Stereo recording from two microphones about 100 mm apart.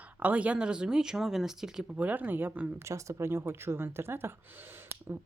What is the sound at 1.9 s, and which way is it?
Speech, 15° right (ahead or behind).